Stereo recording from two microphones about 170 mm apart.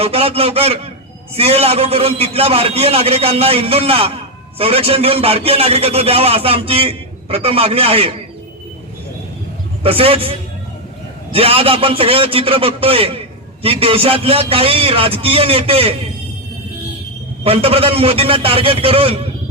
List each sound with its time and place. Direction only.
0.0 s a man's voice: 35° right (ahead or behind)
9.8 s a man's voice: 35° right (ahead or behind)
17.4 s a man's voice: 35° right (ahead or behind)